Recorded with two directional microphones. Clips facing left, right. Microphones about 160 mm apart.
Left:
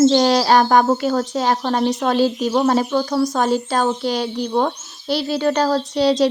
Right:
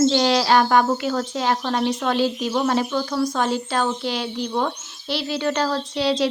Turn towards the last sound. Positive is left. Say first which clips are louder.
# left 5 dB
turn(degrees=40)  # may be behind; listen again after turning